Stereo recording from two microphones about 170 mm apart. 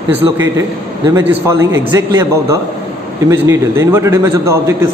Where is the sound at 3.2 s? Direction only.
15° right (ahead or behind).